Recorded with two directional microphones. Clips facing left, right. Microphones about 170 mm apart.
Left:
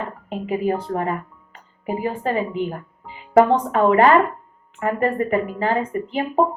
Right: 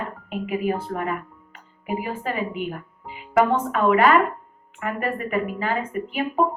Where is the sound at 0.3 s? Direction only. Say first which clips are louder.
Left 3 dB; 30° left (ahead or behind).